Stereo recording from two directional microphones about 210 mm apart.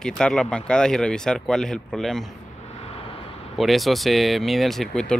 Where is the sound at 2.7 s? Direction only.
30° left (ahead or behind).